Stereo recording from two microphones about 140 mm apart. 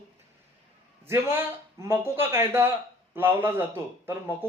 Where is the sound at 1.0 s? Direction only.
15° right (ahead or behind).